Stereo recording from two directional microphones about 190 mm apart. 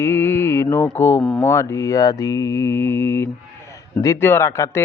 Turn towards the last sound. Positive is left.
turn(degrees=15)  # may be behind; listen again after turning